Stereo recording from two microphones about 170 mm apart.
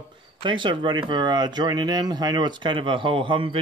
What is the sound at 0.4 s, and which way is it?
Speech, 30° right (ahead or behind).